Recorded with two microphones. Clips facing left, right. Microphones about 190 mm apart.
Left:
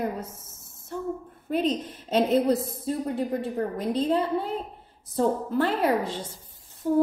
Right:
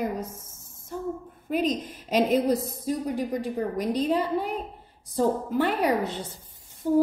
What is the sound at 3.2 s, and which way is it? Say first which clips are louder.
Speech: left 1 dB; 25° left (ahead or behind).